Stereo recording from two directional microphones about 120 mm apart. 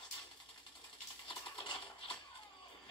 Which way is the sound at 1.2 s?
45° left (ahead or behind).